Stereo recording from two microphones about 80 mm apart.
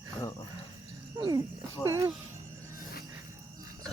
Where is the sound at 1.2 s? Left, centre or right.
Right.